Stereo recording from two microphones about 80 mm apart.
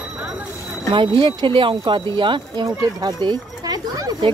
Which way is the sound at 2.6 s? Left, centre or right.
Right.